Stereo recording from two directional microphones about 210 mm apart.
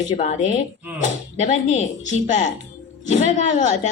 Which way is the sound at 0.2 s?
35° left (ahead or behind).